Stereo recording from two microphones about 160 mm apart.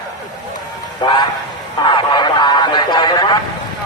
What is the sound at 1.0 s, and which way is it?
Speech, 30° left (ahead or behind).